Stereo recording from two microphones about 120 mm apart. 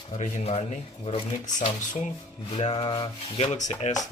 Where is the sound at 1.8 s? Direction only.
90° left.